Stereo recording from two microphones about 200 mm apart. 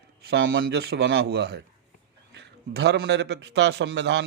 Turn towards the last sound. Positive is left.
turn(degrees=-60)  # may be behind; listen again after turning